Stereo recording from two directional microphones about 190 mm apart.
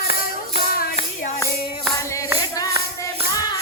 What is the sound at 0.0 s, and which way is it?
Music, 50° left (ahead or behind).